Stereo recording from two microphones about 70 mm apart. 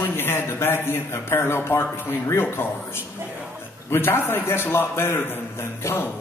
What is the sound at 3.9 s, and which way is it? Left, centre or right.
Speech, left.